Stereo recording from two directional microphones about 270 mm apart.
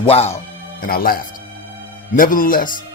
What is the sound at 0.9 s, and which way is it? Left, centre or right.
Speech, left.